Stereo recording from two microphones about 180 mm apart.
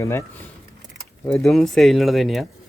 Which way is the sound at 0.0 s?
15° left (ahead or behind).